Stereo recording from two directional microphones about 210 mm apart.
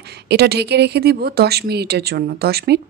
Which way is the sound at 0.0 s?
50° right (ahead or behind).